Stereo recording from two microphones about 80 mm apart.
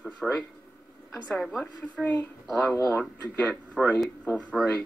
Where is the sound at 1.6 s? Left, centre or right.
Centre.